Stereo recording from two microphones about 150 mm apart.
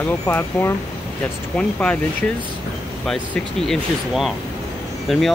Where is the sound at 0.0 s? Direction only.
10° left (ahead or behind).